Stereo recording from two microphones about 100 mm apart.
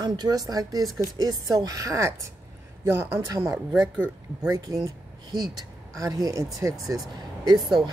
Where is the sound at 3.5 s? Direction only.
5° right (ahead or behind).